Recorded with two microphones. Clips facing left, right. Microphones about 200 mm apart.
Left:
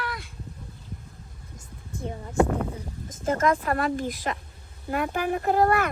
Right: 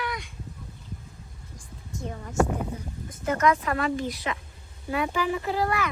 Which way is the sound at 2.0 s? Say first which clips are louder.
Left 2 dB; 20° left (ahead or behind).